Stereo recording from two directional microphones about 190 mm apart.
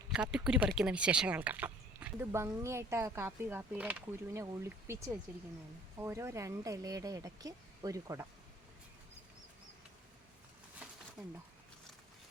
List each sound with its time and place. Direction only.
0.1 s speech: 5° right (ahead or behind)